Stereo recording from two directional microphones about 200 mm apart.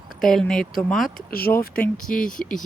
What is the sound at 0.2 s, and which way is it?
Speech, centre (ahead or behind).